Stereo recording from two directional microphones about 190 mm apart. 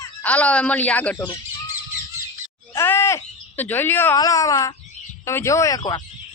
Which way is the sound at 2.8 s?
10° left (ahead or behind).